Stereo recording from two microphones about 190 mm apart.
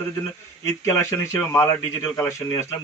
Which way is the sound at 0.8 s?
15° left (ahead or behind).